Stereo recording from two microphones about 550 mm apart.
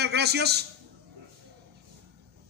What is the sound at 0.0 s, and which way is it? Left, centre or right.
Speech, centre.